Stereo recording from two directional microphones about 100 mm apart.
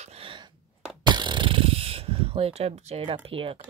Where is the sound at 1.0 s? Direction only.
50° right (ahead or behind); by 3.6 s 65° right (ahead or behind).